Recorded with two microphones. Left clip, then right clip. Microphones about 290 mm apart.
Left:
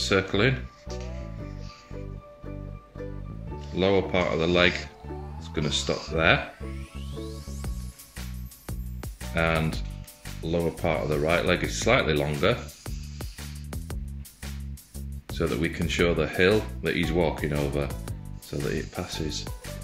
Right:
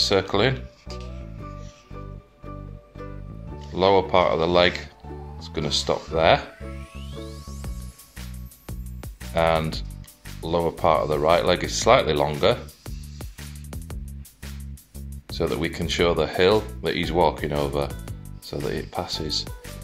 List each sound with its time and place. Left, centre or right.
0.0 s speech: right
3.7 s speech: right
7.2 s music: centre
9.3 s speech: right
10.4 s speech: right
10.8 s speech: right
12.8 s music: centre
15.3 s speech: right
18.9 s speech: right